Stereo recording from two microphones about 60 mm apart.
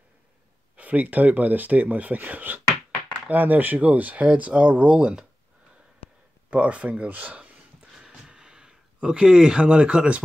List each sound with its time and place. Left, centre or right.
0.7 s speech: right
6.5 s speech: right
8.1 s a sound: centre